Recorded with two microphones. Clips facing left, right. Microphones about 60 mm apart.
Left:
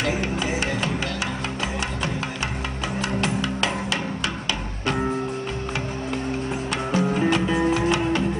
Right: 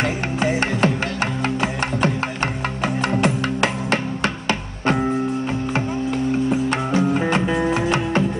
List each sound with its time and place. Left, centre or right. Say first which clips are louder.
0.0 s music: right 3 dB; right
3.0 s music: right 4 dB; right
6.7 s music: right 4 dB; right